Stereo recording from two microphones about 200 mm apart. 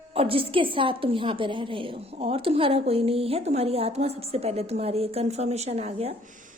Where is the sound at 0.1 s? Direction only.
30° right (ahead or behind).